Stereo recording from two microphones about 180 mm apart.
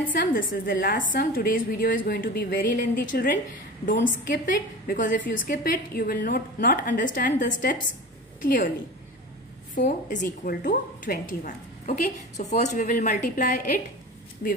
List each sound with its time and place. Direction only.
0.1 s a woman's voice: 50° left (ahead or behind)
9.8 s a woman's voice: 45° left (ahead or behind)